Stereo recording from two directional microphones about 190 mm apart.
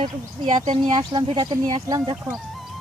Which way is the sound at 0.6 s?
25° right (ahead or behind).